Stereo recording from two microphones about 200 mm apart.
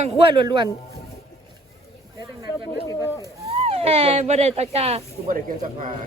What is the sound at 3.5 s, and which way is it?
Speech, 30° right (ahead or behind).